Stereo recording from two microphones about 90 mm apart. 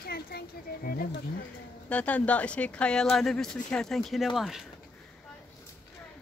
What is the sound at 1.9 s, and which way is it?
Speech, 15° left (ahead or behind).